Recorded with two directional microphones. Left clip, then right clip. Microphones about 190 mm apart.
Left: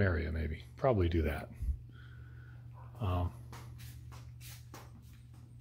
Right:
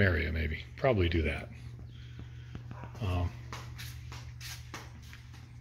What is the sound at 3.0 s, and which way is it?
Speech, 20° left (ahead or behind).